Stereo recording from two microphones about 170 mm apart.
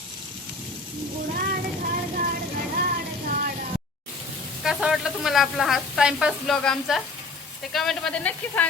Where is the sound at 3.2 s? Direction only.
55° right (ahead or behind).